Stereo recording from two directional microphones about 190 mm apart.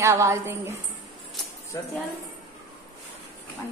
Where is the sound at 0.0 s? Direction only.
15° right (ahead or behind).